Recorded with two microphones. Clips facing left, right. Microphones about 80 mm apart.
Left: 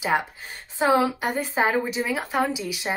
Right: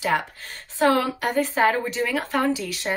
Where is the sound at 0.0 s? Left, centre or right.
Centre.